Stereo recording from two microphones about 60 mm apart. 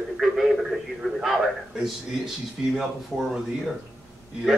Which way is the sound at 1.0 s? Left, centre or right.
Centre.